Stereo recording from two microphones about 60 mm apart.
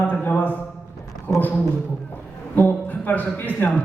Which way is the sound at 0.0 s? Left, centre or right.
Left.